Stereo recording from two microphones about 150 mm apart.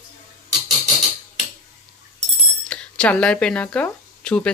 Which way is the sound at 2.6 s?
5° left (ahead or behind).